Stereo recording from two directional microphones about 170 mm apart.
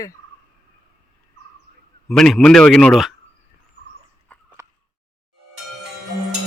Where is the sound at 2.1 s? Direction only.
Centre (ahead or behind).